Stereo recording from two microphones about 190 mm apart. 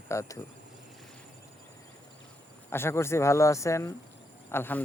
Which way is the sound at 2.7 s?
15° left (ahead or behind).